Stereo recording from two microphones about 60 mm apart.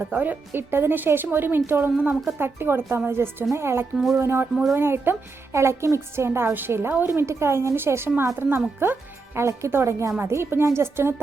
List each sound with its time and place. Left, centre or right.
0.0 s a woman's voice: right
3.9 s speech: centre
4.2 s a woman's voice: right